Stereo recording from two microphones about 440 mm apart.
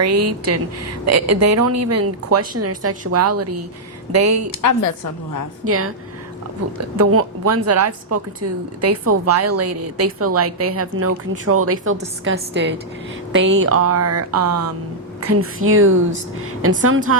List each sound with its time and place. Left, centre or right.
0.0 s a woman's voice: right
4.5 s a woman's voice: left
5.6 s a woman's voice: right